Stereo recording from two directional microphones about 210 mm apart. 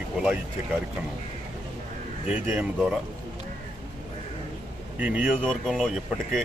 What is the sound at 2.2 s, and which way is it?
Speech, 5° right (ahead or behind).